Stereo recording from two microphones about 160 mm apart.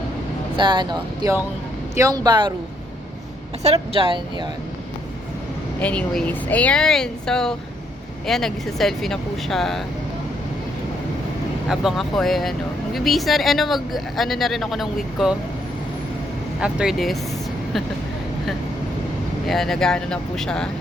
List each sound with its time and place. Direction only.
0.5 s speech: 30° right (ahead or behind)
3.6 s speech: 40° right (ahead or behind)
5.8 s speech: 10° left (ahead or behind)
11.7 s speech: centre (ahead or behind)
16.6 s speech: 5° right (ahead or behind)
19.5 s speech: centre (ahead or behind)